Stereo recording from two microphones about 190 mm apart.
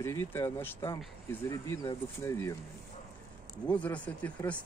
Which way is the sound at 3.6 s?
5° left (ahead or behind).